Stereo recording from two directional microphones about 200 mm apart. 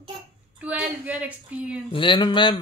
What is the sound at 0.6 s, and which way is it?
Speech, 5° right (ahead or behind).